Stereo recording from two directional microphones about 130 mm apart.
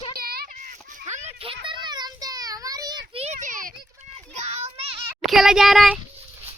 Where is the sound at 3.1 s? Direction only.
50° right (ahead or behind).